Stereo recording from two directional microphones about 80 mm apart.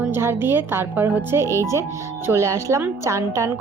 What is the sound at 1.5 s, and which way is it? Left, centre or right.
Speech, left.